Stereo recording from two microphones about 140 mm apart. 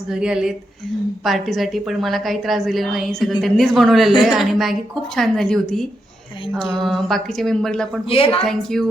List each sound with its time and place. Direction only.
0.1 s a woman's voice: 5° right (ahead or behind)
8.1 s a woman's voice: 40° left (ahead or behind)
8.4 s a woman's voice: 5° left (ahead or behind)